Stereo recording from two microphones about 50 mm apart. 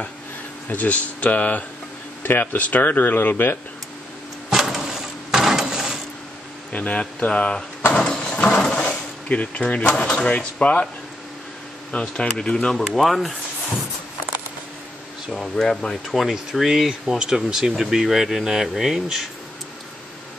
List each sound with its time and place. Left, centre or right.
0.7 s speech: left
4.5 s a sound: centre
6.7 s speech: left
7.9 s a sound: centre
11.9 s speech: centre
12.7 s speech: centre
15.3 s speech: centre